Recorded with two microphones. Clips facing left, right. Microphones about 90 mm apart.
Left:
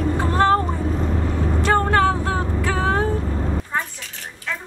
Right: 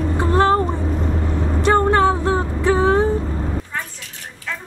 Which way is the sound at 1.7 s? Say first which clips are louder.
Right 3 dB; 20° right (ahead or behind).